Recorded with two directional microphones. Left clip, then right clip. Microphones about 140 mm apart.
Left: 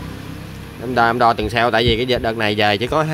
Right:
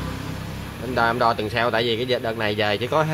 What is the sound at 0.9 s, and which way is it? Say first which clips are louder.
Speech: left 5 dB; 75° left (ahead or behind).